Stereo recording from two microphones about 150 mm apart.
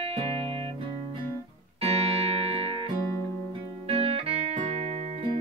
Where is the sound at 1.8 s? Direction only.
45° right (ahead or behind).